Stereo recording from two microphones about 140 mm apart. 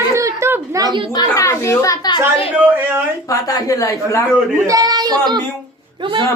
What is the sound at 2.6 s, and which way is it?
Speech, 15° right (ahead or behind).